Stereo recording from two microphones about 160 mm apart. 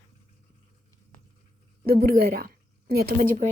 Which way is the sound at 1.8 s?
70° right (ahead or behind).